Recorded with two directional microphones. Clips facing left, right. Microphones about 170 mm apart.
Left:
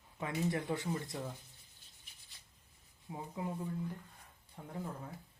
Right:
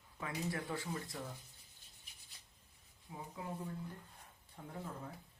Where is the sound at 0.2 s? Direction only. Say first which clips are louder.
Left 5 dB; 20° left (ahead or behind).